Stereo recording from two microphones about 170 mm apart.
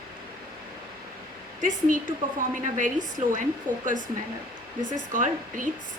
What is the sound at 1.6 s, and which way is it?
A woman's voice, 50° right (ahead or behind).